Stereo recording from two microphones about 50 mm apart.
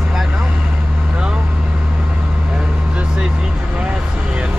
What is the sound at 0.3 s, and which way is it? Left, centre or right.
Vehicle, right.